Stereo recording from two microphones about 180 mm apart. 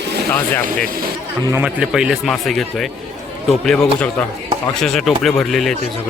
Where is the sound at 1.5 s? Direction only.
10° right (ahead or behind).